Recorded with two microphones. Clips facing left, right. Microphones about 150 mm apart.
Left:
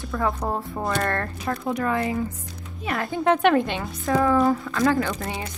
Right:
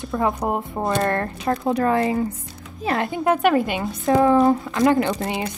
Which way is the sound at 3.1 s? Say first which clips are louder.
Left 1 dB; 5° right (ahead or behind).